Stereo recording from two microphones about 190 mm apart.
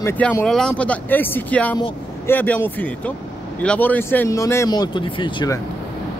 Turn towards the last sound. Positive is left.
turn(degrees=20)  # may be behind; listen again after turning